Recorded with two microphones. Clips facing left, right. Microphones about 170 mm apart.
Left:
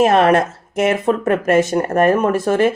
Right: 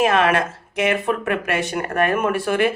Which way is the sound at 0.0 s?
40° left (ahead or behind).